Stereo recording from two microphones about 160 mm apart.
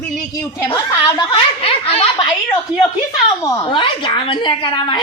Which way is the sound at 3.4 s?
30° left (ahead or behind).